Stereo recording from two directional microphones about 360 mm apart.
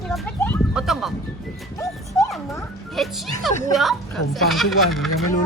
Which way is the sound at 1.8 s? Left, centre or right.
Centre.